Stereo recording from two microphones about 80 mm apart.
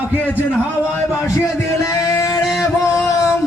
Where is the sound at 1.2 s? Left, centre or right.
Left.